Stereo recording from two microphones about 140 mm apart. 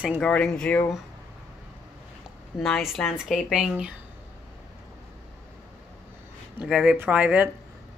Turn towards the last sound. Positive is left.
turn(degrees=-10)  # may be behind; listen again after turning